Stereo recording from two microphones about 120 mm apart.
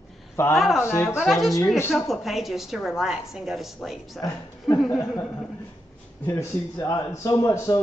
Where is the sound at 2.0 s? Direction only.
Centre (ahead or behind).